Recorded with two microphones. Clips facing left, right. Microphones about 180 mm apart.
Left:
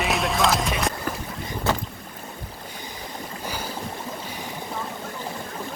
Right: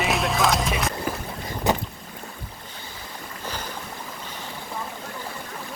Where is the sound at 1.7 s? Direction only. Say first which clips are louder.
Right 2 dB; 15° right (ahead or behind).